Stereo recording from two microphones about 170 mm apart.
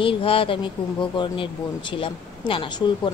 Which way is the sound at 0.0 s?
30° left (ahead or behind).